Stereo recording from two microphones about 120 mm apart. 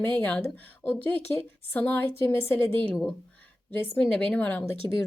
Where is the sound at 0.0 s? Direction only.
15° left (ahead or behind).